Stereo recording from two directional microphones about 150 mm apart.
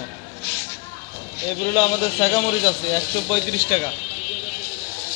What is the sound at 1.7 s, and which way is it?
A man's voice, 30° left (ahead or behind).